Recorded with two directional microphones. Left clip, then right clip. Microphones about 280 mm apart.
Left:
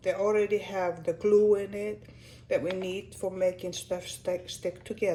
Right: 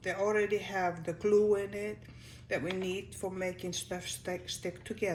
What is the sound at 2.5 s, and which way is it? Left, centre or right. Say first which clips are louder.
Speech: left 5 dB; centre.